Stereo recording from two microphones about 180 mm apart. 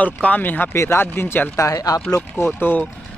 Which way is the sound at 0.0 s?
10° left (ahead or behind).